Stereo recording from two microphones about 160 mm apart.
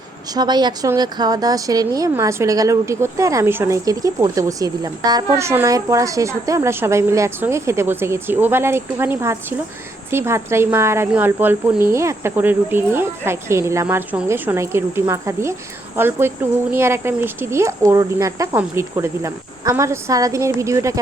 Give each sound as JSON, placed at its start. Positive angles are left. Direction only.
{"t": 0.3, "sound": "a woman's voice", "side_deg": -25}